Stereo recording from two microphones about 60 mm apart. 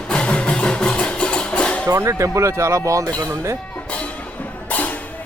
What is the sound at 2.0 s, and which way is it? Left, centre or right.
Speech, right.